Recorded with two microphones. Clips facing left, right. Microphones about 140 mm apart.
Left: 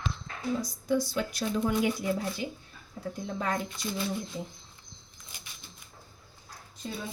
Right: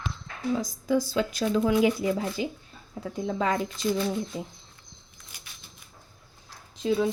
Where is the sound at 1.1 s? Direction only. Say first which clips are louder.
Right 5 dB; 90° right.